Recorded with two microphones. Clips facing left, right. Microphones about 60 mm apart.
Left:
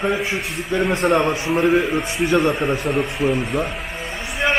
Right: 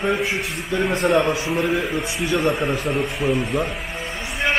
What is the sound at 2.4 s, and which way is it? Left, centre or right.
Speech, centre.